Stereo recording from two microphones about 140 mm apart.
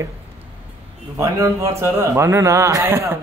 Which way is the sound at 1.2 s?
20° right (ahead or behind).